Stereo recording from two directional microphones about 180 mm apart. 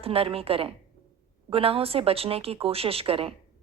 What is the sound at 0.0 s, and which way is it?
A woman's voice, 30° right (ahead or behind).